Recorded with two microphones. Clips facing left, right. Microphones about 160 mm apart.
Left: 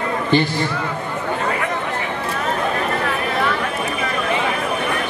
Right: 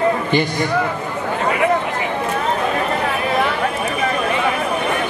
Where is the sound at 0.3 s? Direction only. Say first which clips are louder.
Even; 15° right (ahead or behind).